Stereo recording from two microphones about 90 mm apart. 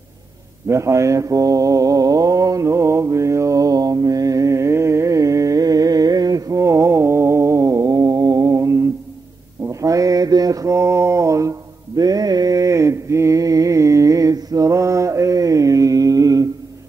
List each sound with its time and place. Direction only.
0.7 s mantra: 30° right (ahead or behind)